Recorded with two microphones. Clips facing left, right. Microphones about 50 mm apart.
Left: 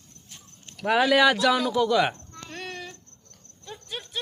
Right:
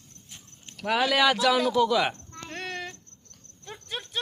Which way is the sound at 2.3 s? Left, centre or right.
Right.